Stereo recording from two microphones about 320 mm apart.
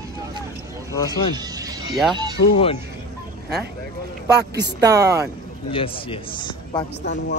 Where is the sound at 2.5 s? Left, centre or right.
Centre.